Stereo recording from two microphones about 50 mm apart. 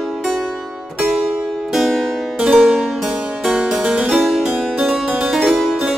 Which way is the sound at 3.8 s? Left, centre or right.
Right.